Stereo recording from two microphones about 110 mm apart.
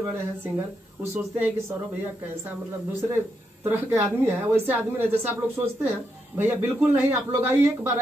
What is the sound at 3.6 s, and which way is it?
Speech, 20° right (ahead or behind).